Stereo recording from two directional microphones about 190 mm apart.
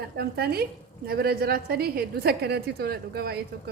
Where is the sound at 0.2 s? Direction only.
55° right (ahead or behind).